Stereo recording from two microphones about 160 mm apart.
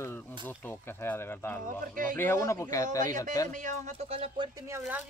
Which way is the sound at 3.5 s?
50° right (ahead or behind).